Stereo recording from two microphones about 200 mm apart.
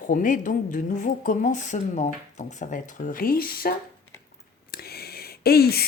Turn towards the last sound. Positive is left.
turn(degrees=50)  # may be behind; listen again after turning